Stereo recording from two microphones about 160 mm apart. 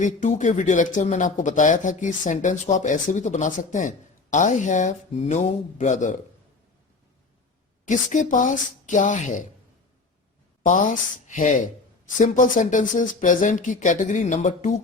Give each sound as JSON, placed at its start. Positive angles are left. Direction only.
{"t": 0.0, "sound": "speech", "side_deg": 50}
{"t": 7.9, "sound": "speech", "side_deg": 50}
{"t": 10.7, "sound": "speech", "side_deg": 55}